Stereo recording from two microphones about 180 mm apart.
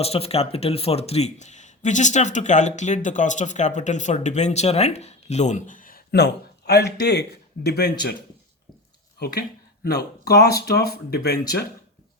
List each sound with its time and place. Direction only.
0.0 s speech: 35° left (ahead or behind); by 8.1 s 65° left (ahead or behind)
9.1 s speech: 65° left (ahead or behind)